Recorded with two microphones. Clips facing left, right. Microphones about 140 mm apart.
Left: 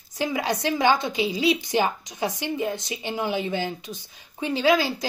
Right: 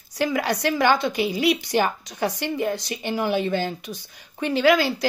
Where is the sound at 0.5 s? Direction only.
60° right (ahead or behind).